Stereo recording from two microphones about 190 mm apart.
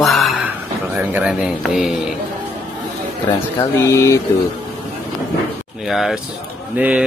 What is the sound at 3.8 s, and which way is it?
Speech, 15° left (ahead or behind).